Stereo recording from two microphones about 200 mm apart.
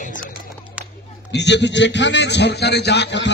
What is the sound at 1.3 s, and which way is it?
Speech, 60° left (ahead or behind).